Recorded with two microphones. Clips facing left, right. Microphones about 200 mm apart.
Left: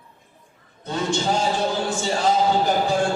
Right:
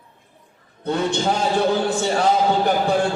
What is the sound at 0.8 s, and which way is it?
A man's voice, 60° right (ahead or behind).